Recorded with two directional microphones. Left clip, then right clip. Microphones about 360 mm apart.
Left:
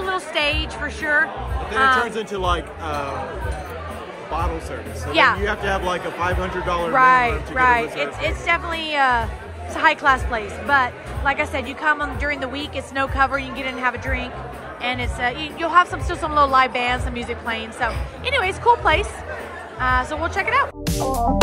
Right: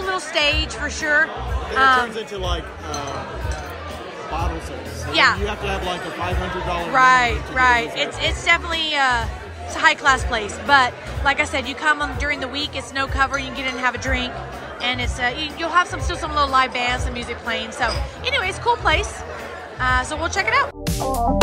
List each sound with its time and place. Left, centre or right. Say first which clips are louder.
0.0 s a woman's voice: right 1 dB; centre
2.1 s a man's voice: left 4 dB; left
5.1 s a woman's voice: even; centre
6.9 s a woman's voice: right 1 dB; centre